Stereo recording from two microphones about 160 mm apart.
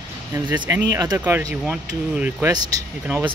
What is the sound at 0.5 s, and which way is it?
Speech, 10° right (ahead or behind).